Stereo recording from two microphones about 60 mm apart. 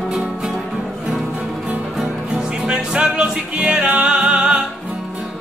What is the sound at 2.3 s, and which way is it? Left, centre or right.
Music, centre.